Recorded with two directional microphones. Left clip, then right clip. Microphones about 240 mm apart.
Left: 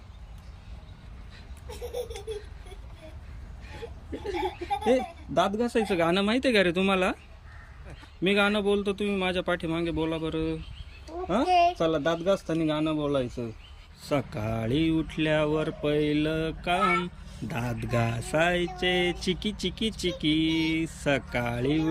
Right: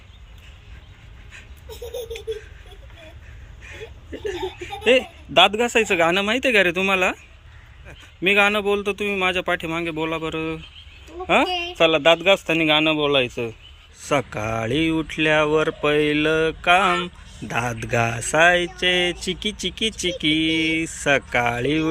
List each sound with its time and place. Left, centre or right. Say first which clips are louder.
4.1 s laughter: right 3 dB; centre
4.9 s a man's voice: right 9 dB; right
5.8 s speech: right 5 dB; centre
8.2 s speech: right 7 dB; centre
11.3 s speech: right 3 dB; right
14.1 s speech: right 7 dB; centre